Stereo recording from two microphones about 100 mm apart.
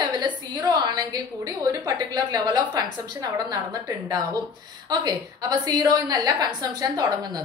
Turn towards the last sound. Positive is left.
turn(degrees=-45)  # may be behind; listen again after turning